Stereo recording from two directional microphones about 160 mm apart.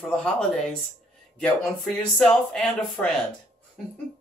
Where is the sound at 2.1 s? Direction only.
5° left (ahead or behind).